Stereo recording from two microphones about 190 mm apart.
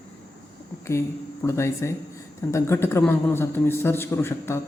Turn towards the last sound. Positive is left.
turn(degrees=10)  # may be behind; listen again after turning